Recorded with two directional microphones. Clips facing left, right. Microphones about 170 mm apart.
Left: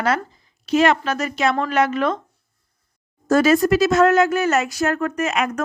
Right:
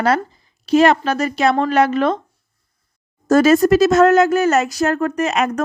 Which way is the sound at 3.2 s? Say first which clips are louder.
Right 4 dB; 40° right (ahead or behind).